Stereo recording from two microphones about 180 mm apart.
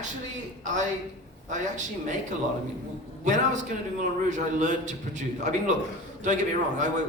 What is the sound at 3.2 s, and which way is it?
A woman's voice, 40° right (ahead or behind).